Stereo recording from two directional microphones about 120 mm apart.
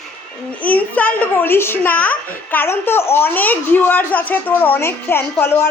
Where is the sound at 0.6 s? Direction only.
10° left (ahead or behind).